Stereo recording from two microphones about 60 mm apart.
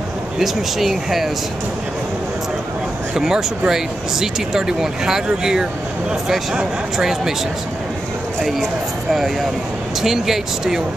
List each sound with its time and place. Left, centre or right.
0.4 s speech: centre
3.2 s speech: centre
8.4 s speech: centre
10.0 s speech: centre